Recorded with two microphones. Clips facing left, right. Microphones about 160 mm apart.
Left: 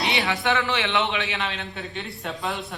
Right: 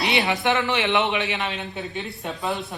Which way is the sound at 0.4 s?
20° right (ahead or behind).